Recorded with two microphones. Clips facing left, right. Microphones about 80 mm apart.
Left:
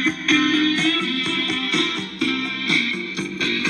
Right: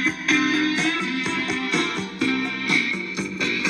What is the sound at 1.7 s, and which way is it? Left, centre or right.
Music, right.